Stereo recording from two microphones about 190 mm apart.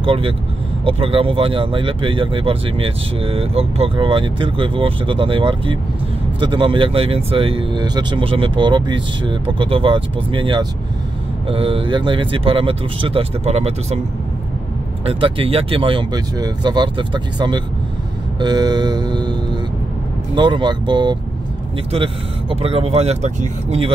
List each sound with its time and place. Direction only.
0.0 s speech: 30° right (ahead or behind)
15.0 s speech: 30° right (ahead or behind)
18.4 s vehicle: 20° right (ahead or behind)
20.3 s speech: 25° right (ahead or behind)